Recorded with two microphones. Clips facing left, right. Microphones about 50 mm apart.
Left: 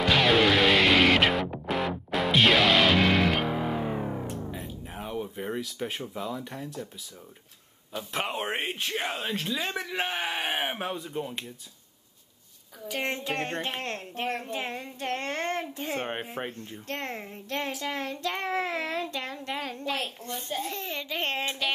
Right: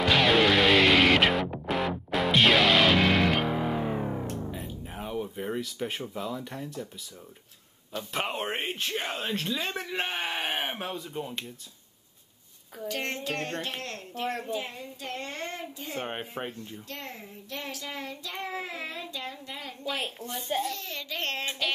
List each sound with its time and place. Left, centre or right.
0.0 s music: centre
7.9 s speech: centre
12.8 s a woman's voice: centre; by 14.4 s left
14.5 s a child's voice: left
16.4 s speech: centre
16.9 s a child's voice: left
20.6 s a woman's voice: left